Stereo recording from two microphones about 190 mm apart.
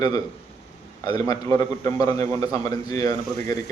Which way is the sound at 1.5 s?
20° left (ahead or behind).